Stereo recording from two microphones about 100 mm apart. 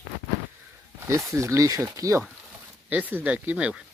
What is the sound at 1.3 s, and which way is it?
Speech, 30° right (ahead or behind).